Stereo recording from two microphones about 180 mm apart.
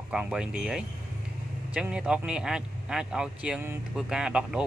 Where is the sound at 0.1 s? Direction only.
5° right (ahead or behind).